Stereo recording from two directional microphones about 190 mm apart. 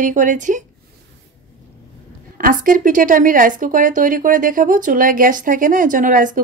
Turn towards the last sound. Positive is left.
turn(degrees=-45)  # may be behind; listen again after turning